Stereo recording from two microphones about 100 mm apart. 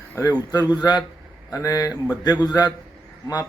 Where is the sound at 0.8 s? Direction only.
45° left (ahead or behind).